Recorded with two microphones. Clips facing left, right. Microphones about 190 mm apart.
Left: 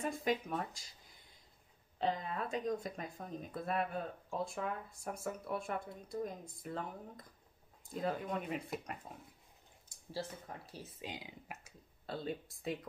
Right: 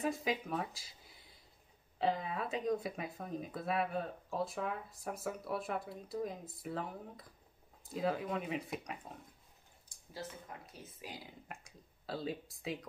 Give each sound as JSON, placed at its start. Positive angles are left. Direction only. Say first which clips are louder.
{"t": 0.0, "sound": "speech", "louder": "even", "side_deg": 0}
{"t": 2.0, "sound": "speech", "louder": "right 2 dB", "side_deg": -5}
{"t": 10.7, "sound": "speech", "louder": "left 3 dB", "side_deg": 25}
{"t": 11.6, "sound": "speech", "louder": "right 1 dB", "side_deg": 0}